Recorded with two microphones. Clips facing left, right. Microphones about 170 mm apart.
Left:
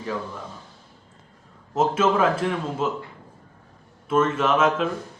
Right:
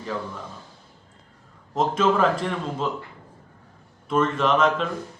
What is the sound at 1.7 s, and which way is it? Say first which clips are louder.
Speech: left 1 dB; 5° left (ahead or behind).